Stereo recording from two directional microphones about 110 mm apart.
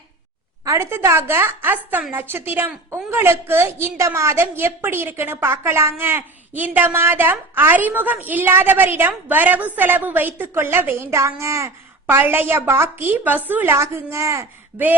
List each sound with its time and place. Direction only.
0.6 s a woman's voice: 25° right (ahead or behind)